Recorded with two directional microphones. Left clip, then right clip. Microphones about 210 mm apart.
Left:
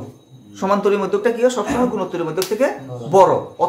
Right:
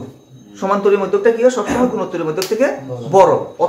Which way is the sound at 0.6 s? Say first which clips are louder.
Right 3 dB; 40° left (ahead or behind).